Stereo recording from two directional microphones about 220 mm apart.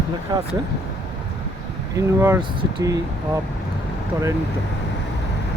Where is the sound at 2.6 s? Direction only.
15° right (ahead or behind).